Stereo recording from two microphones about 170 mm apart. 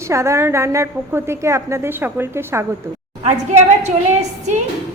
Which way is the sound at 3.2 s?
40° right (ahead or behind).